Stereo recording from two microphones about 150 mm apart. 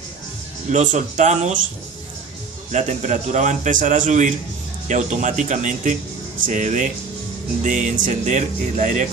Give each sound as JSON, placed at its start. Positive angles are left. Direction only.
{"t": 0.7, "sound": "a man's voice", "side_deg": -55}
{"t": 2.7, "sound": "a man's voice", "side_deg": -55}